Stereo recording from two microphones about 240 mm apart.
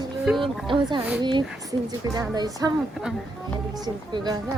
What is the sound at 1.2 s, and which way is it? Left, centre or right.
A woman's voice, centre.